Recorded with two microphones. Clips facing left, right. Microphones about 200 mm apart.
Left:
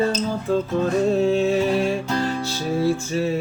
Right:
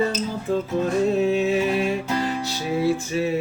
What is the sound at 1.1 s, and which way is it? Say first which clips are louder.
Music: left 1 dB; 20° right (ahead or behind).